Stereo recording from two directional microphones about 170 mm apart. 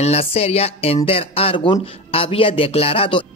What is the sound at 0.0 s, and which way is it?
Speech, 35° left (ahead or behind).